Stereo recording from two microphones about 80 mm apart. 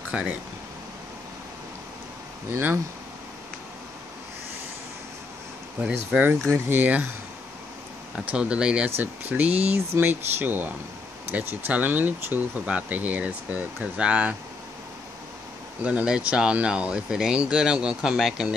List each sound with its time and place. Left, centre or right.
0.1 s speech: centre
2.5 s speech: right
5.8 s speech: centre
8.3 s speech: centre
8.9 s speech: right
15.8 s speech: centre